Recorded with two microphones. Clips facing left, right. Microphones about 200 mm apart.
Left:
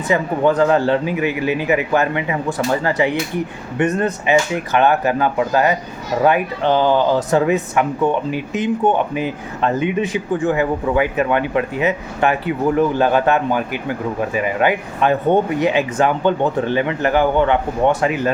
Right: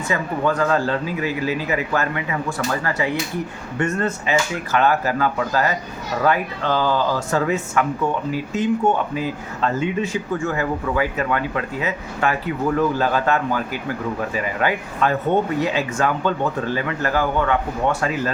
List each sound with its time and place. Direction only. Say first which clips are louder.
0.1 s a man's voice: left 6 dB; 20° left (ahead or behind)